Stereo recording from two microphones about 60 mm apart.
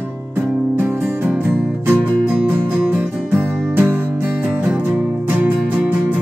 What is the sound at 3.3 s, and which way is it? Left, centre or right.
Music, right.